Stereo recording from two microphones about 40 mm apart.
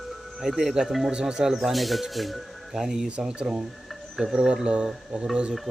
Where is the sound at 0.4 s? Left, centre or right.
Centre.